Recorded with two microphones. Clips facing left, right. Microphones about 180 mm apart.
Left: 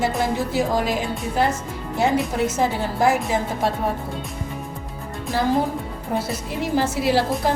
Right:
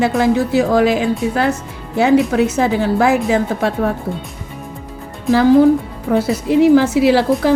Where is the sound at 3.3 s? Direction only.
75° right (ahead or behind).